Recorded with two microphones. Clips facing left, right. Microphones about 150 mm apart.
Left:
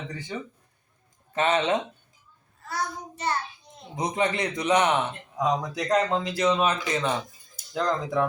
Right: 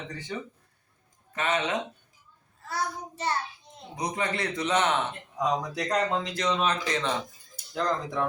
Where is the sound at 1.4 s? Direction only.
30° left (ahead or behind).